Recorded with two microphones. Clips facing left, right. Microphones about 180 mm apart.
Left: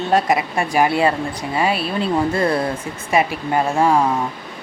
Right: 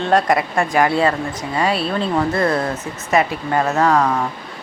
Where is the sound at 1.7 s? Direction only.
25° right (ahead or behind).